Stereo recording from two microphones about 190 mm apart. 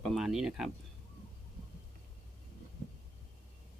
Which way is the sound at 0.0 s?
Centre (ahead or behind).